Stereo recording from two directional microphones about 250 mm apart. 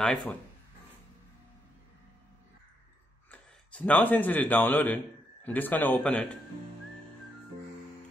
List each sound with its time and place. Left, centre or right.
0.0 s speech: centre
3.3 s speech: centre